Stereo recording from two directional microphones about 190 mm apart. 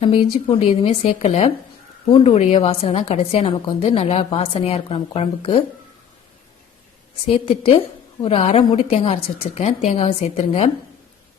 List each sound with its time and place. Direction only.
0.0 s a woman's voice: 30° left (ahead or behind)
7.3 s a woman's voice: 30° left (ahead or behind)